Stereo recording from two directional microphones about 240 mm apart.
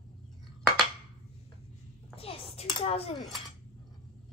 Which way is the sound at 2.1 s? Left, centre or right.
Left.